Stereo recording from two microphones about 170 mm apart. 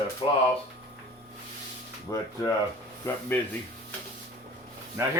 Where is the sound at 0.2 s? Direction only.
35° left (ahead or behind).